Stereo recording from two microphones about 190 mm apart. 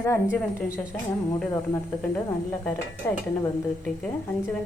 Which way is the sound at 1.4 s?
10° left (ahead or behind).